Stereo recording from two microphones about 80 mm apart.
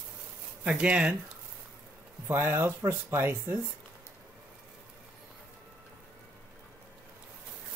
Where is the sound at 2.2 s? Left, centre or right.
Right.